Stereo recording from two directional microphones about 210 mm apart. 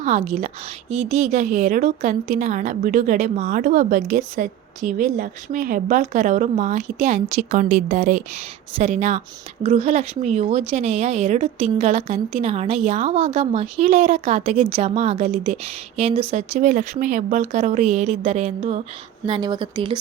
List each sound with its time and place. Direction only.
0.0 s a woman's voice: 30° right (ahead or behind)
19.2 s speech: 20° right (ahead or behind)